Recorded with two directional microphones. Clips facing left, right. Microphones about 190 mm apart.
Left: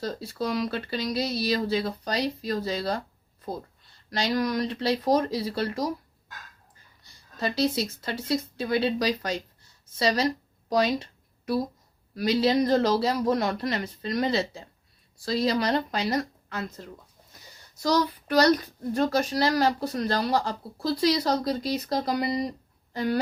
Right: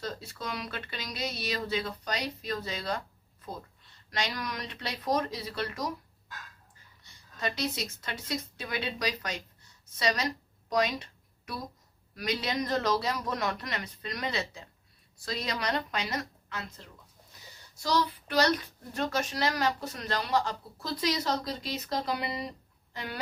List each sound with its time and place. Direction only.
0.0 s a child's voice: 35° left (ahead or behind)
7.0 s a child's voice: 30° left (ahead or behind)
10.7 s a sound: 30° left (ahead or behind)
12.1 s a child's voice: 30° left (ahead or behind)